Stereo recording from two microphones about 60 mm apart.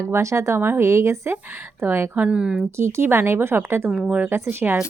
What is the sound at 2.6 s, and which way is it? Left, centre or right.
A woman's voice, right.